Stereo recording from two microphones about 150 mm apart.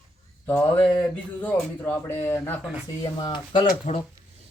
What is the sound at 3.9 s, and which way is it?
Speech, 50° left (ahead or behind).